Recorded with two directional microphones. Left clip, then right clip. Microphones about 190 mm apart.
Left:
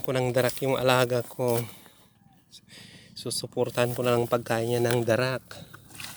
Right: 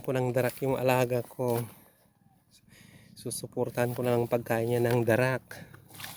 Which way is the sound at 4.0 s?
5° right (ahead or behind).